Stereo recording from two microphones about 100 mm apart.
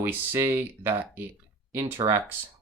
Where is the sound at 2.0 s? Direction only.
50° right (ahead or behind).